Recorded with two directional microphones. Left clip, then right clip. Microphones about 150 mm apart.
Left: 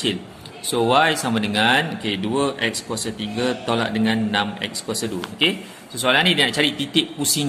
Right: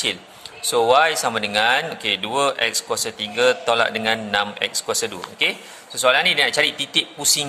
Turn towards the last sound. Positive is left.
turn(degrees=-45)  # may be behind; listen again after turning